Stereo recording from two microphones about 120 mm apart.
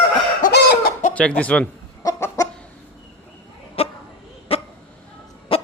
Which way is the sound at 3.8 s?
55° left (ahead or behind).